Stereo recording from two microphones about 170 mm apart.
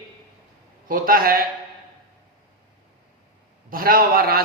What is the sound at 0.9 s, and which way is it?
Speech, 55° right (ahead or behind).